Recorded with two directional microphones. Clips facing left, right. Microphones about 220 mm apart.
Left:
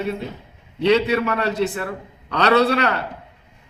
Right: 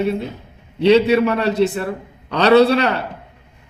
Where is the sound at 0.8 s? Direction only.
30° right (ahead or behind).